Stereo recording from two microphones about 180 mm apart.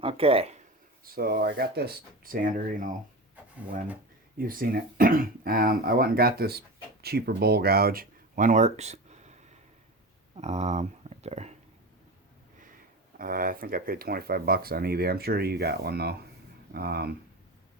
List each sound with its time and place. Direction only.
0.0 s speech: 30° right (ahead or behind)
1.0 s speech: 55° right (ahead or behind)
4.4 s speech: 50° right (ahead or behind); by 11.5 s 35° right (ahead or behind)
13.1 s speech: 50° right (ahead or behind)